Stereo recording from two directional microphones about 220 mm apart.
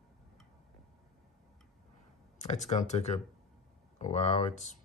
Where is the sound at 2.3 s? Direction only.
30° left (ahead or behind).